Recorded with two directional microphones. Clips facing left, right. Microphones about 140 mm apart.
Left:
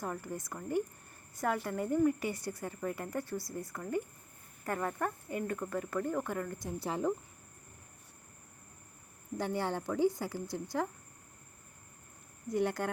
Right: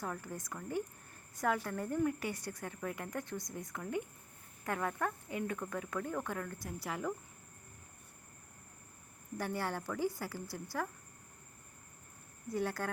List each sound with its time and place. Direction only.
0.0 s speech: 10° left (ahead or behind)
6.6 s a woman's voice: 25° left (ahead or behind)
9.4 s a woman's voice: 20° left (ahead or behind)
12.5 s speech: 15° left (ahead or behind)